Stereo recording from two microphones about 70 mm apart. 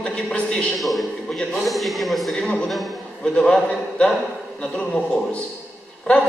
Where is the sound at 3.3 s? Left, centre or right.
Centre.